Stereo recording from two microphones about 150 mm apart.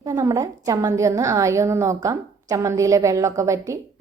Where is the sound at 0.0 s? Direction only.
20° right (ahead or behind).